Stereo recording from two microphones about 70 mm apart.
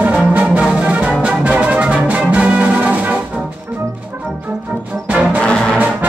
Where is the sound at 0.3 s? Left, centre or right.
Centre.